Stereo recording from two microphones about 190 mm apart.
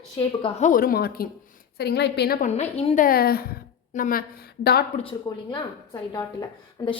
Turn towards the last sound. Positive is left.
turn(degrees=25)  # may be behind; listen again after turning